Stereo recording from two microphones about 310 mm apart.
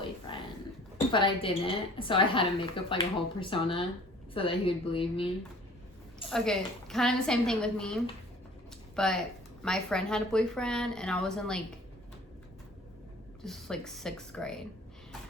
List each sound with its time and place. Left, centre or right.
1.1 s a woman's voice: centre
6.3 s a woman's voice: centre
9.0 s a woman's voice: centre
13.4 s a woman's voice: centre